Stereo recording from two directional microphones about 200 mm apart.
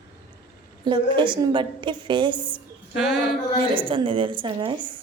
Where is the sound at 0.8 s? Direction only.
25° right (ahead or behind).